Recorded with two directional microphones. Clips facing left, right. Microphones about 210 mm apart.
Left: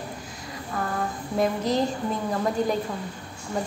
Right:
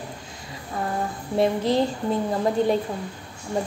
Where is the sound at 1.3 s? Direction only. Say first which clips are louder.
Right 3 dB; 30° right (ahead or behind).